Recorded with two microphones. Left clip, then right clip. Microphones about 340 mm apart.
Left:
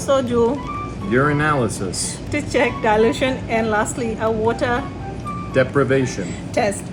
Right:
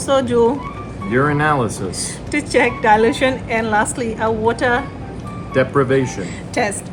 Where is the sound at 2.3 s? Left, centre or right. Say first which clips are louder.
Right 3 dB; right.